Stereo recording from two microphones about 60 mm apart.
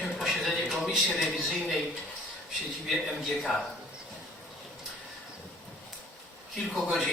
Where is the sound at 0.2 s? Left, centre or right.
Centre.